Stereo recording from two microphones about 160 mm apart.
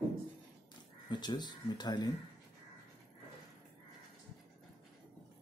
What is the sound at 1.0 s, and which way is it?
Speech, 25° left (ahead or behind).